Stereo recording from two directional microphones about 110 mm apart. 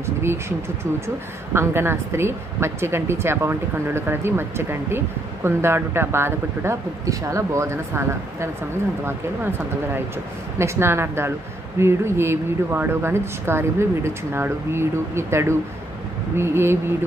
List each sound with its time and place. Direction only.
0.0 s a woman's voice: 25° right (ahead or behind)
10.6 s a woman's voice: 25° right (ahead or behind)